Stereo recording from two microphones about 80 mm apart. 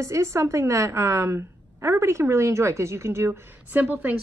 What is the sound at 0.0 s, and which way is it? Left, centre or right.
A woman's voice, right.